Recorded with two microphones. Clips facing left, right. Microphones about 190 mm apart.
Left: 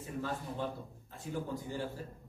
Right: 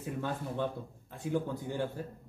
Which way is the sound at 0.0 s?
65° right (ahead or behind).